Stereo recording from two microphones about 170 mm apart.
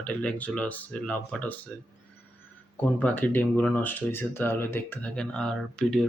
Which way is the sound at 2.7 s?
10° left (ahead or behind).